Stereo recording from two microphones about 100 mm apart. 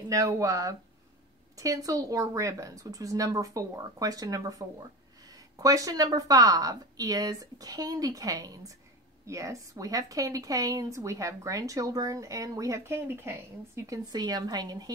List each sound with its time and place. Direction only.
0.1 s a woman's voice: 35° right (ahead or behind)
13.8 s a woman's voice: 40° right (ahead or behind)